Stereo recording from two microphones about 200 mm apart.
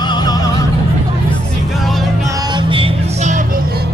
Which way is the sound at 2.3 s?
20° right (ahead or behind).